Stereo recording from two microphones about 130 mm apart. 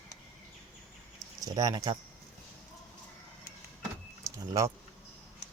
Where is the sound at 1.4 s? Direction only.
25° right (ahead or behind).